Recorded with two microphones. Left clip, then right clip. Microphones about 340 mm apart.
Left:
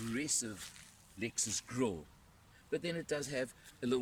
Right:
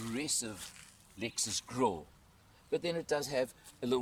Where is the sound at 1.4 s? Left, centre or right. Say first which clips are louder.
Right 7 dB; centre.